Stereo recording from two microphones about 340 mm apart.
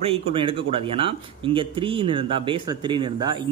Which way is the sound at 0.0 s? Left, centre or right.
Centre.